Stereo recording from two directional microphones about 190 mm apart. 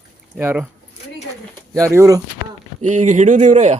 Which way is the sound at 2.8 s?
40° right (ahead or behind).